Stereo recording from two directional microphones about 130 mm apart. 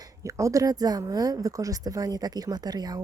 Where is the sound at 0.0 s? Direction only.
25° right (ahead or behind).